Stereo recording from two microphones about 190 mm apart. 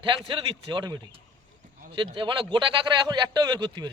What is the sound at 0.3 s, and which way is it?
A man's voice, 25° right (ahead or behind).